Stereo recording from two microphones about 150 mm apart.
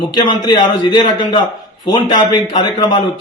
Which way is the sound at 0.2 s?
30° left (ahead or behind).